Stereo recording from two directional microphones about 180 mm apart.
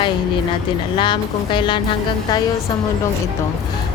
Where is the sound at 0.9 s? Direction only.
25° left (ahead or behind).